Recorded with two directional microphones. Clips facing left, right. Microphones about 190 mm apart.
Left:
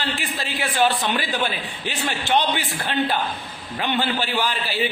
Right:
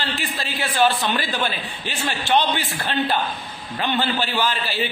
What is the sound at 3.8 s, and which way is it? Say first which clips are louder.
A man's voice: right 1 dB; 15° left (ahead or behind).